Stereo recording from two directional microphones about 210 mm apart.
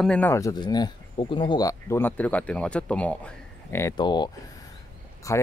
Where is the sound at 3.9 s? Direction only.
20° left (ahead or behind).